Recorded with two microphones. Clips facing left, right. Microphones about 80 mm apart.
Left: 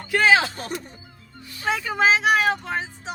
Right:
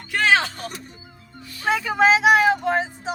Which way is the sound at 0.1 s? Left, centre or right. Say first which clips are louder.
Left 1 dB; centre.